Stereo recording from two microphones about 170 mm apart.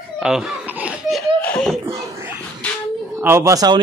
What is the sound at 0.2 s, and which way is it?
Laughter, 5° right (ahead or behind).